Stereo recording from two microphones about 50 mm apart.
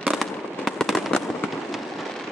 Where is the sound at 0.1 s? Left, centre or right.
Centre.